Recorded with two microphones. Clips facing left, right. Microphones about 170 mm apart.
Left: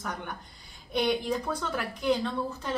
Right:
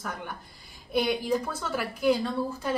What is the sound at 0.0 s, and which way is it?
A woman's voice, 5° right (ahead or behind).